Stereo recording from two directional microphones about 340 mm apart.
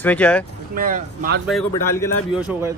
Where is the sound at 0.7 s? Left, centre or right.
Right.